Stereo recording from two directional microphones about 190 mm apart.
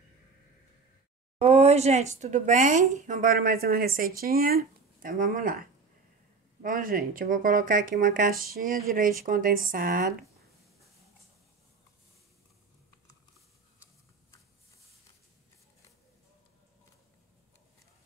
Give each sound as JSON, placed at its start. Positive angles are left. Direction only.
{"t": 1.4, "sound": "speech", "side_deg": -35}